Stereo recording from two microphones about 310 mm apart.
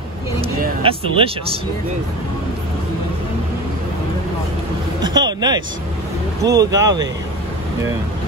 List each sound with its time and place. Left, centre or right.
0.4 s vehicle: centre
5.0 s a sound: centre
6.4 s speech: centre